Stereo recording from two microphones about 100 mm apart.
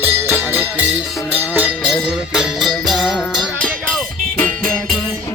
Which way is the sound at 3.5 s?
10° left (ahead or behind).